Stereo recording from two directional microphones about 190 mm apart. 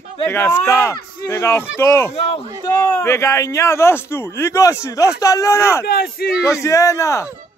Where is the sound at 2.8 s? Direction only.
10° left (ahead or behind).